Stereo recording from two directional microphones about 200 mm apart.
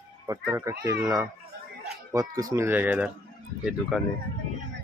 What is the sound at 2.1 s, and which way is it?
Speech, 15° right (ahead or behind).